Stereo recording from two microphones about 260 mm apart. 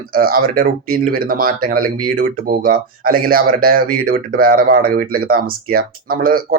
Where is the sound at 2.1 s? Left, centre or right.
Right.